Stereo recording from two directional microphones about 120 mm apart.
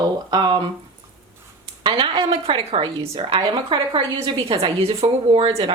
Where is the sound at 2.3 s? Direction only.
55° right (ahead or behind).